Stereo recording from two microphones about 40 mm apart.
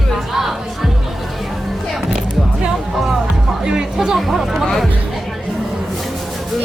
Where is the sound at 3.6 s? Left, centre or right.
Centre.